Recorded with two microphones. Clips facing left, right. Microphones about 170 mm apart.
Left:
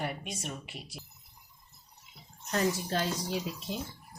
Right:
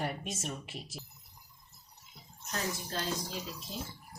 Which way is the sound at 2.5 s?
75° left (ahead or behind).